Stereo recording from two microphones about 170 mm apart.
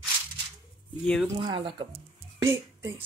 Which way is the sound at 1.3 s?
30° right (ahead or behind).